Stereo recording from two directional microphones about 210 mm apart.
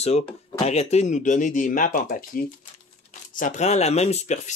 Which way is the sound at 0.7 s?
30° left (ahead or behind).